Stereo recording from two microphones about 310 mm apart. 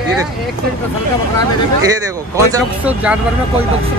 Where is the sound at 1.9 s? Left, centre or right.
Centre.